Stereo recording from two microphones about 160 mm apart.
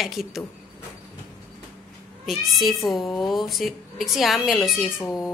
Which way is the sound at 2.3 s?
Centre (ahead or behind).